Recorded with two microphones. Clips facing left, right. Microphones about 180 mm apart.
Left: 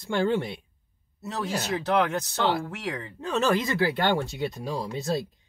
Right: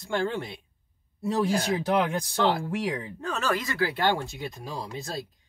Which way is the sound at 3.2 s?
25° left (ahead or behind).